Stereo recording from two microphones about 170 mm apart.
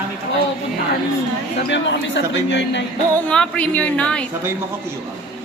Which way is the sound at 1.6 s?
90° left.